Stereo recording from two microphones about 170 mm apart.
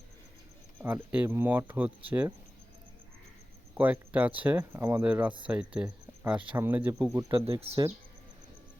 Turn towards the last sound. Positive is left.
turn(degrees=-35)  # may be behind; listen again after turning